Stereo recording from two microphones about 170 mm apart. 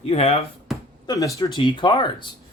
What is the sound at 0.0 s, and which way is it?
Speech, 35° left (ahead or behind).